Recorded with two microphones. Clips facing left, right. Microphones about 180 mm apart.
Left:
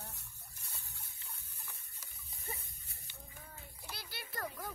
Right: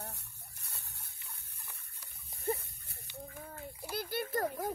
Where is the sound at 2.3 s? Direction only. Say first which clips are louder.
Right 13 dB; 60° right (ahead or behind).